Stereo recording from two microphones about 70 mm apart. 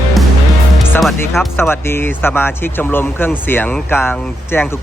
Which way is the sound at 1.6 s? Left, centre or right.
Left.